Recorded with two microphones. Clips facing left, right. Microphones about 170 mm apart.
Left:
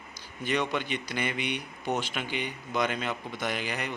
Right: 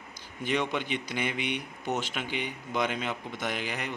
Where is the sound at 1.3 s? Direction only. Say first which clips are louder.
Even; 50° right (ahead or behind).